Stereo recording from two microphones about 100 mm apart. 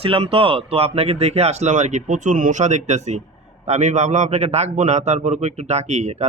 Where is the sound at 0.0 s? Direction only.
70° right (ahead or behind); by 2.8 s 90° right.